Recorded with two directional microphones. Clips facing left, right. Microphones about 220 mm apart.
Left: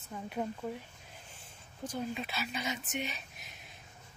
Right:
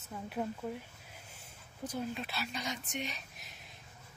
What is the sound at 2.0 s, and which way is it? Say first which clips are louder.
Speech: left 2 dB; centre (ahead or behind).